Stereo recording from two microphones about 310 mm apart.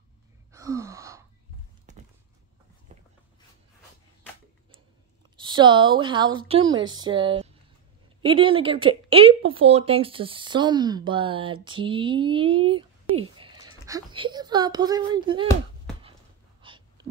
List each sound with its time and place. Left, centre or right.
0.5 s wail: centre
5.4 s speech: centre
16.6 s a sound: centre